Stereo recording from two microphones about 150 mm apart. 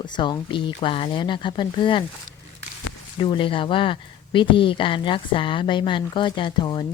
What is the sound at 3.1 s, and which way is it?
Speech, 30° left (ahead or behind).